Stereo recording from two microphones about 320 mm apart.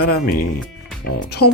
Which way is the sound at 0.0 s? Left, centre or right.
Left.